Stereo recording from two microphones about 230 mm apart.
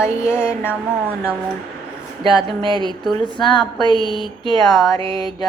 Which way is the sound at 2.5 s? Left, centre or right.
Right.